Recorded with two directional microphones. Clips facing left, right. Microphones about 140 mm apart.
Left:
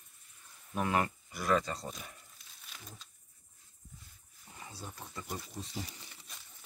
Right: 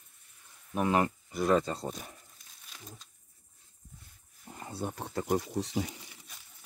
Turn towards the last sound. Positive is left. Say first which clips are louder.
# right 11 dB
turn(degrees=-85)